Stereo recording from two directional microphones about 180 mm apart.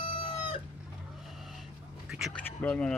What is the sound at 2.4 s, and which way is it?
Speech, 10° left (ahead or behind).